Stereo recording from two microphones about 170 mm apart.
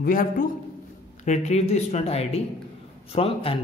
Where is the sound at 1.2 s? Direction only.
45° left (ahead or behind).